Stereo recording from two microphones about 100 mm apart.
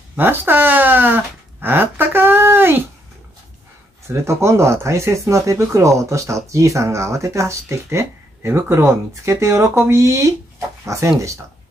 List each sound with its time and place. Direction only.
0.1 s speech: 20° right (ahead or behind)
4.1 s speech: 30° right (ahead or behind)